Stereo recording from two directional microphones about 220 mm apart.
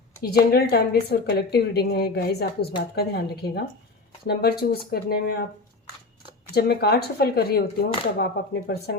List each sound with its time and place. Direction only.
0.2 s a woman's voice: 45° left (ahead or behind)
6.5 s a woman's voice: 45° left (ahead or behind)